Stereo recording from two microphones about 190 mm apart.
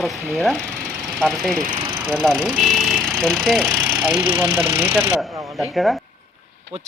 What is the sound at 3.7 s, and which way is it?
Speech, 10° right (ahead or behind).